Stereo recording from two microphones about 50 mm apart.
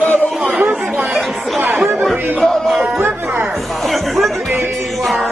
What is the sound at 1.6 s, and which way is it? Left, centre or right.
Chatter, right.